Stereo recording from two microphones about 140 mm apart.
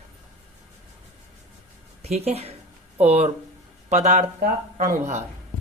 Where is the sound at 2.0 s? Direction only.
50° right (ahead or behind).